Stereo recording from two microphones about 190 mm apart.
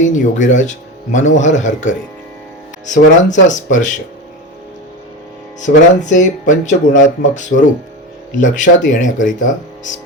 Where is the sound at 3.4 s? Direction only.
40° left (ahead or behind).